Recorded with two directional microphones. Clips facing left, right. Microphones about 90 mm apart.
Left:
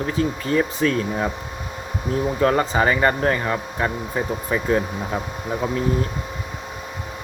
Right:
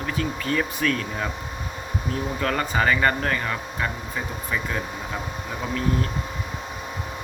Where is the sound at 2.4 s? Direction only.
30° left (ahead or behind).